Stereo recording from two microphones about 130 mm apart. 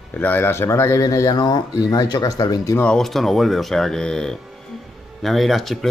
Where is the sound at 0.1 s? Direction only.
15° left (ahead or behind).